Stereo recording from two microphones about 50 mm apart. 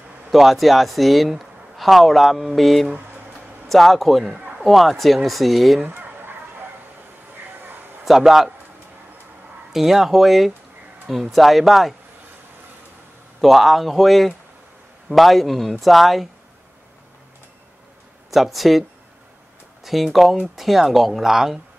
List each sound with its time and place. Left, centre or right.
0.3 s speech: centre
5.9 s a sound: right
8.0 s a man's voice: centre
9.7 s speech: centre
13.4 s speech: centre
18.3 s speech: centre